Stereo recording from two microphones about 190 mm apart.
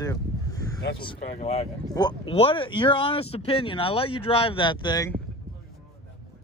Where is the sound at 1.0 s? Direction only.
30° left (ahead or behind).